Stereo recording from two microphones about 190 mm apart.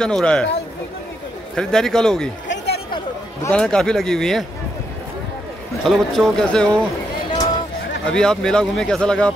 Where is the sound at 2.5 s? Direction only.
60° left (ahead or behind).